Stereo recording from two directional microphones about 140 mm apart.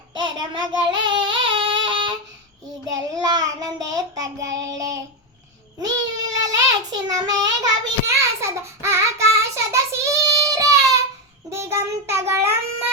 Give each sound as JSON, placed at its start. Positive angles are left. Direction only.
{"t": 0.1, "sound": "child singing", "side_deg": -35}
{"t": 2.8, "sound": "child singing", "side_deg": -25}